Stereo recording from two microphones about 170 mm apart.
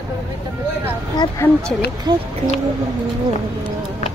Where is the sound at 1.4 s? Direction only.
15° left (ahead or behind).